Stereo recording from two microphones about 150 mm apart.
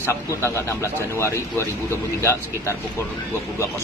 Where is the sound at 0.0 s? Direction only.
20° left (ahead or behind).